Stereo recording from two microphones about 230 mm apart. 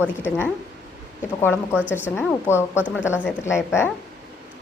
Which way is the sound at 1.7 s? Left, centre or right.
Centre.